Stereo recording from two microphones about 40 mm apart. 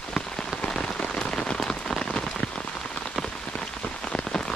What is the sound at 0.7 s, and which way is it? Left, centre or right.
Rain on surface, centre.